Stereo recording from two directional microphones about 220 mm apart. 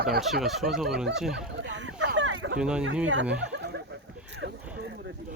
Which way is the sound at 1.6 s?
55° right (ahead or behind).